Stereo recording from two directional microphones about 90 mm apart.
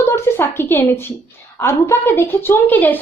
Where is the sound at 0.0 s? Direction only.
25° left (ahead or behind).